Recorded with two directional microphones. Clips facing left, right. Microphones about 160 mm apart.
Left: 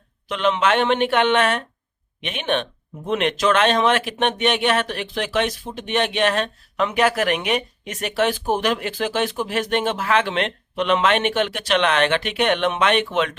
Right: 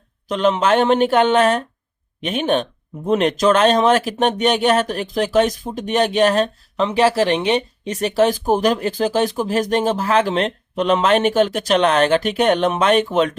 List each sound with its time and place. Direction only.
0.3 s speech: 40° right (ahead or behind)